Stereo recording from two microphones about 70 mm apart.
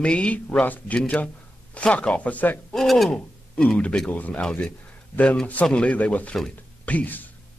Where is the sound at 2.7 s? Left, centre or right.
Centre.